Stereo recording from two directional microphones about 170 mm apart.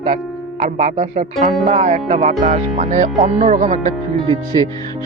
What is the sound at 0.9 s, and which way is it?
Speech, 35° right (ahead or behind).